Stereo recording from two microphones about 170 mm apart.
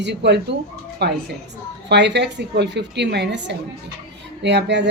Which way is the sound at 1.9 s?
90° right.